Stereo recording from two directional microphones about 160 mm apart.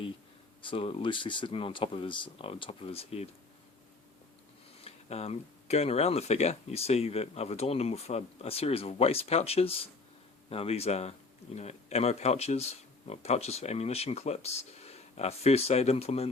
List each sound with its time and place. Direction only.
0.6 s speech: 35° left (ahead or behind)
4.8 s speech: 40° left (ahead or behind)